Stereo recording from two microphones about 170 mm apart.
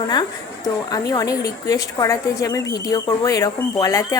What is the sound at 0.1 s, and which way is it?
A woman's voice, 20° left (ahead or behind).